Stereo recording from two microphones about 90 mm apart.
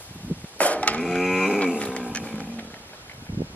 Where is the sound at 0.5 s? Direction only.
15° left (ahead or behind).